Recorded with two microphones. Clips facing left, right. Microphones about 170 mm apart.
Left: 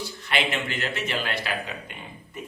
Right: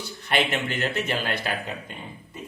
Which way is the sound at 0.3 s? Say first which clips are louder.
Right 3 dB; 50° right (ahead or behind).